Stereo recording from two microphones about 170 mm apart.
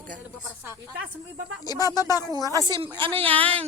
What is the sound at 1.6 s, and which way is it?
Speech, 20° left (ahead or behind).